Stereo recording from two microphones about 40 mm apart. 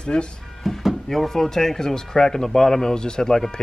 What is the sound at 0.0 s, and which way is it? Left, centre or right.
Speech, left.